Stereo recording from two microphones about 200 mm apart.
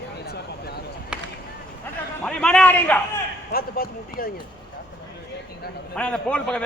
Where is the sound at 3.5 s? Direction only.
50° left (ahead or behind).